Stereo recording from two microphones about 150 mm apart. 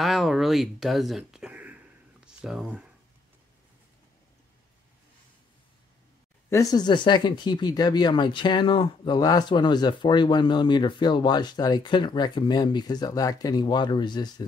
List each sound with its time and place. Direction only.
0.0 s speech: centre (ahead or behind)
6.5 s speech: 25° left (ahead or behind)